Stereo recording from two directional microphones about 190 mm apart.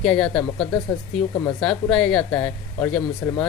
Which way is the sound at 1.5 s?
5° left (ahead or behind).